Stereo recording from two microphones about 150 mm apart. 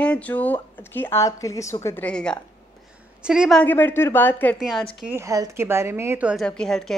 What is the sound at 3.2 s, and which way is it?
Speech, 5° right (ahead or behind).